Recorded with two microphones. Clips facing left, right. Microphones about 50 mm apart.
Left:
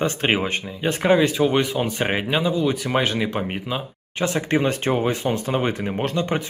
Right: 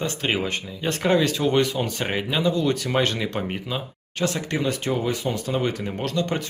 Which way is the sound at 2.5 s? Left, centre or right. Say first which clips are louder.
Left 1 dB; centre.